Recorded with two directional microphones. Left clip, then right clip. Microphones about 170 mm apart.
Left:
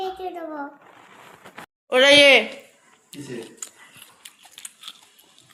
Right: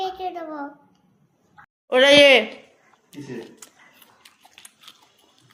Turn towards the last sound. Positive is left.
turn(degrees=-10)  # may be behind; listen again after turning